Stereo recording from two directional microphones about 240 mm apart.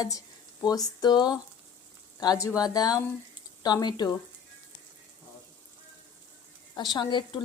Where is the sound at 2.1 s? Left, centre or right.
Centre.